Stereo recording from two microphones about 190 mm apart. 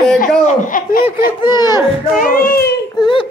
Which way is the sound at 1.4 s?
20° left (ahead or behind).